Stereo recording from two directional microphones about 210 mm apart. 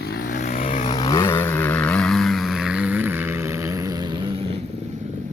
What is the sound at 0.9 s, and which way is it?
Vehicle, 20° left (ahead or behind).